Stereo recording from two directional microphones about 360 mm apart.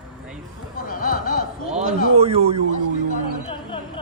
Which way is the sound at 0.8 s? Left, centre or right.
Left.